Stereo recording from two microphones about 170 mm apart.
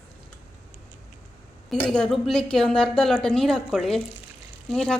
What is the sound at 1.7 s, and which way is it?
Speech, 5° left (ahead or behind).